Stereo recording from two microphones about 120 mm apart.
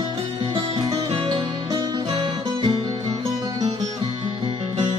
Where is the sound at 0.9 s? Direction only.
40° right (ahead or behind).